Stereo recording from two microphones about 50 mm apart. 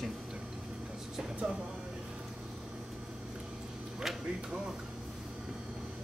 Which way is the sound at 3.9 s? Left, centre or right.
Centre.